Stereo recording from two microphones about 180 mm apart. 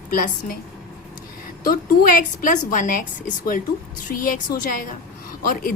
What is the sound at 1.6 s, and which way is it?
A woman's voice, 50° left (ahead or behind).